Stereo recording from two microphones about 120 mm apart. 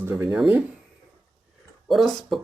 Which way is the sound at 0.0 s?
20° right (ahead or behind).